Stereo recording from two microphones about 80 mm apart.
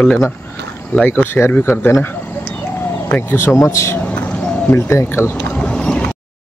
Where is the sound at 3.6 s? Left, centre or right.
Left.